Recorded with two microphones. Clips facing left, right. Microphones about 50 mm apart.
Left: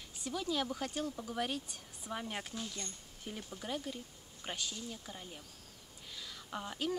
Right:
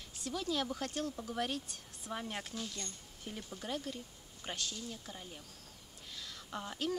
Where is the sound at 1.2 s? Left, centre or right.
Centre.